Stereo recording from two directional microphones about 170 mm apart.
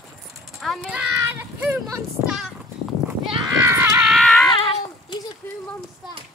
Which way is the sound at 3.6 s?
15° right (ahead or behind).